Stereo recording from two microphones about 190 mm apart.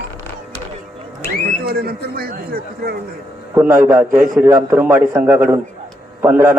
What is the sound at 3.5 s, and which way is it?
A man's voice, 10° right (ahead or behind).